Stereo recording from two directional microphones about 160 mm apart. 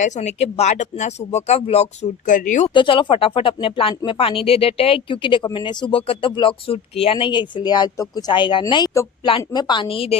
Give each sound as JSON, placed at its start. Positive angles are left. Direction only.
{"t": 0.0, "sound": "speech", "side_deg": 45}
{"t": 2.7, "sound": "a woman's voice", "side_deg": 30}